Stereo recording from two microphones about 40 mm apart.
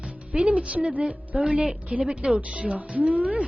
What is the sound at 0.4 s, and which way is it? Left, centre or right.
Speech, right.